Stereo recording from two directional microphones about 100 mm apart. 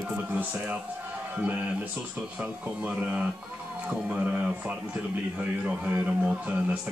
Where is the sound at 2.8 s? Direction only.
10° right (ahead or behind).